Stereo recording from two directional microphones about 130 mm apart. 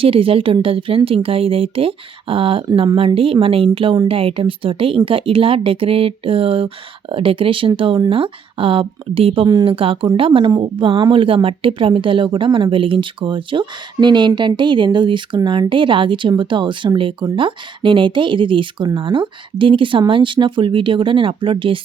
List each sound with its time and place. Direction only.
0.0 s speech: 45° right (ahead or behind)
9.5 s speech: 30° right (ahead or behind)
9.7 s speech: 45° right (ahead or behind)